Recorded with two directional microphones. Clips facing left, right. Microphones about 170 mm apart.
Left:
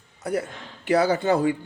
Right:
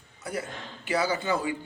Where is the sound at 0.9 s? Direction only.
60° left (ahead or behind).